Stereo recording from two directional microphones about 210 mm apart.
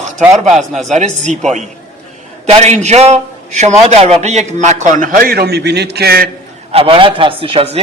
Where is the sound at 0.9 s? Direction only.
35° right (ahead or behind).